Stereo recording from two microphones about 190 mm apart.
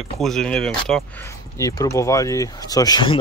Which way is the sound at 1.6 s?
15° left (ahead or behind).